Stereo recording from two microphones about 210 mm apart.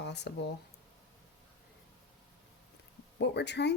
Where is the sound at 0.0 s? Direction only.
55° left (ahead or behind).